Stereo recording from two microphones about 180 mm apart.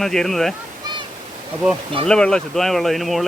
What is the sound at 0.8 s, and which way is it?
Waterfall, 25° right (ahead or behind).